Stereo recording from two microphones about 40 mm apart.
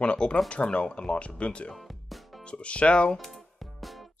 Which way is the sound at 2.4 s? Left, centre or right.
Left.